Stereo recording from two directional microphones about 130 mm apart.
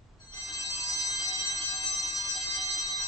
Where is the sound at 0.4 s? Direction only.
25° left (ahead or behind).